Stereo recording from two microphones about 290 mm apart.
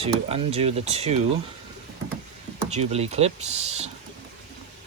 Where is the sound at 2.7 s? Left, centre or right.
Right.